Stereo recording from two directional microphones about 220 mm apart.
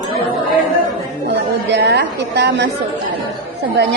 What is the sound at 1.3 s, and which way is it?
A woman's voice, 50° right (ahead or behind).